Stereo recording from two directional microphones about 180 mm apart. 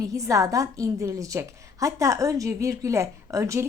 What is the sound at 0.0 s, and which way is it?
A woman's voice, 20° right (ahead or behind).